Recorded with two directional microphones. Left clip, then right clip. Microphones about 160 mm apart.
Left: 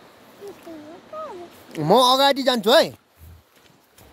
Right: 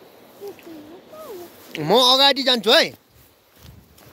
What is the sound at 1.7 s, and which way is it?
Speech, 45° left (ahead or behind).